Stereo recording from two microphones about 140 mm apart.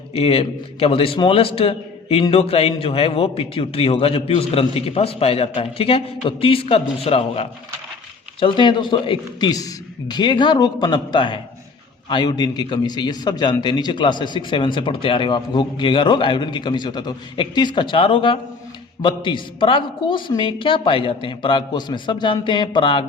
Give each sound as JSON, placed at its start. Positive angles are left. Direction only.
{"t": 0.2, "sound": "a man's voice", "side_deg": 45}